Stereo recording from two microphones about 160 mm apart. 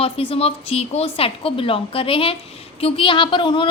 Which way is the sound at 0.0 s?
35° left (ahead or behind).